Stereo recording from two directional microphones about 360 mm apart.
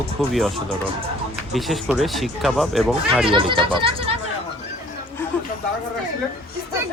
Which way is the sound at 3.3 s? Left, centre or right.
Centre.